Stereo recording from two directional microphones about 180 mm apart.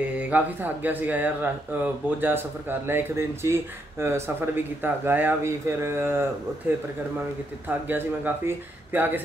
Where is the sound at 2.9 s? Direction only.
15° right (ahead or behind).